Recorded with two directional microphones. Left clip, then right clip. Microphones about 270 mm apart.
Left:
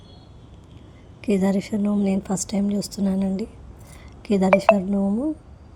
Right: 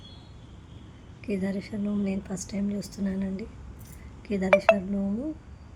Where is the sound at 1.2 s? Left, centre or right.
Left.